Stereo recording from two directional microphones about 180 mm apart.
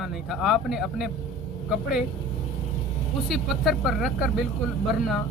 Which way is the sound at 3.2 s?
Centre (ahead or behind).